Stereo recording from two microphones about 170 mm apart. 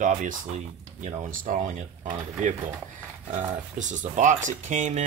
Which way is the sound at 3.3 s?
45° right (ahead or behind).